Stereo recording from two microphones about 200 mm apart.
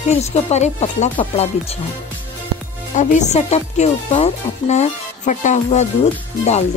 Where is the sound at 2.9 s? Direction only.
35° left (ahead or behind).